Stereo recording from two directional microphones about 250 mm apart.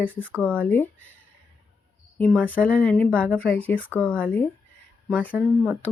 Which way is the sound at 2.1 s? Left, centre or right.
Centre.